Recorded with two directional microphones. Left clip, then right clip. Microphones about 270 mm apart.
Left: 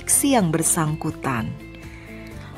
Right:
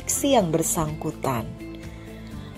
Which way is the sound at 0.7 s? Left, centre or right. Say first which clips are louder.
Left 3 dB; left.